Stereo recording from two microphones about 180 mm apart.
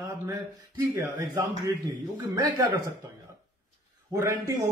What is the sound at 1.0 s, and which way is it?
A man's voice, 15° right (ahead or behind).